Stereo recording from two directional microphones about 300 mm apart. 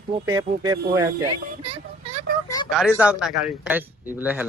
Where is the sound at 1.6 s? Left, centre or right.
Centre.